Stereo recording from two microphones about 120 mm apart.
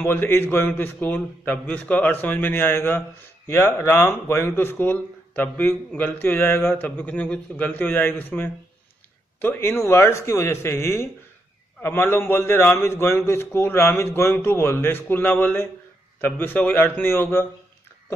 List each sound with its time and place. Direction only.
0.0 s a man's voice: 20° left (ahead or behind)